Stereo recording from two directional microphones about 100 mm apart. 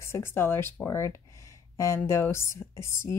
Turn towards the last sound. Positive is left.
turn(degrees=30)  # may be behind; listen again after turning